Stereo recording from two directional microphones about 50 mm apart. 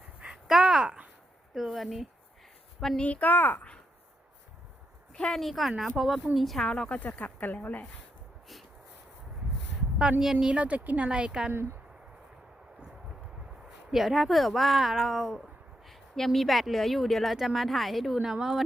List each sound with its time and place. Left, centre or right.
0.4 s a sound: centre
1.5 s a sound: centre
3.0 s speech: left
5.3 s a woman's voice: centre
6.7 s speech: centre; by 7.9 s left
10.0 s a woman's voice: centre
10.6 s speech: right
11.1 s a woman's voice: centre
13.9 s a woman's voice: centre
15.9 s a woman's voice: centre
18.2 s a woman's voice: centre